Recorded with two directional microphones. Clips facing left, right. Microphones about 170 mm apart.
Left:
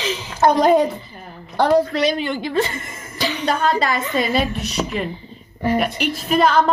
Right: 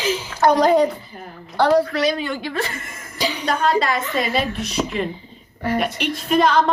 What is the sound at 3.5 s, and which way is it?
A woman's voice, centre (ahead or behind).